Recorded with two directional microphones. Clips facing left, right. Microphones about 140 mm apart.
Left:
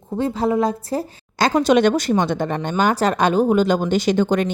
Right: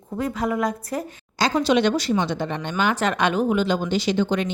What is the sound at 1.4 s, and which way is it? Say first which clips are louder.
A woman's voice: left 4 dB; 50° left (ahead or behind).